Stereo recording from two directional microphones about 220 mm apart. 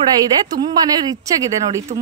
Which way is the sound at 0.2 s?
20° right (ahead or behind).